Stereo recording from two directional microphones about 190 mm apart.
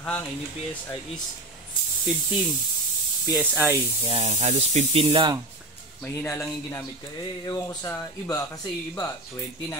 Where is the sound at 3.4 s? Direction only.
10° right (ahead or behind).